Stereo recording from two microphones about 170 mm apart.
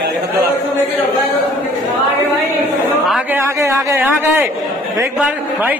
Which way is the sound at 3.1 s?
5° right (ahead or behind).